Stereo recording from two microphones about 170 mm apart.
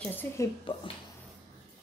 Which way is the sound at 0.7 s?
30° left (ahead or behind).